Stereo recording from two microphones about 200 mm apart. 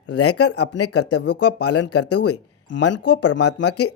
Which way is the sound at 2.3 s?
65° left (ahead or behind).